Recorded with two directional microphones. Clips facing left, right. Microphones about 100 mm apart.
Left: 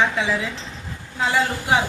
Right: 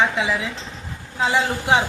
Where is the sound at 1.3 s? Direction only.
15° right (ahead or behind).